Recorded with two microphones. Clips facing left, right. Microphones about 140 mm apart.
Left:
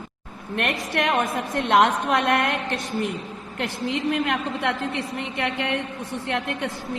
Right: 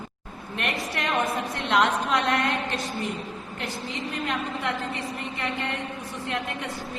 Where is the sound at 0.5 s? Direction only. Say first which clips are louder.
Left 5 dB; 60° left (ahead or behind).